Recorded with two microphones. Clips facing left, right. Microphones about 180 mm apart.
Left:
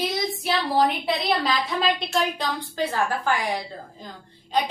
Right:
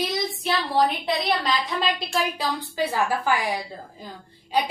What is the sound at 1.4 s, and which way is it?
A woman's voice, centre (ahead or behind).